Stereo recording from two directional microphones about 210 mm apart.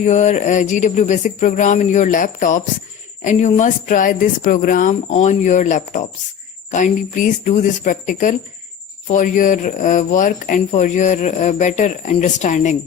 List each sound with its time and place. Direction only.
0.0 s speech: 35° left (ahead or behind)